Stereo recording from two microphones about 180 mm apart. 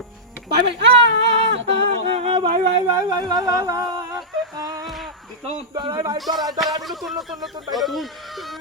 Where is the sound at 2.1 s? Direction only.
30° right (ahead or behind).